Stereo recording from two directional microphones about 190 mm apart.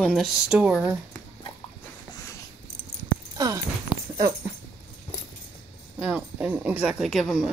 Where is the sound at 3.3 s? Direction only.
20° right (ahead or behind).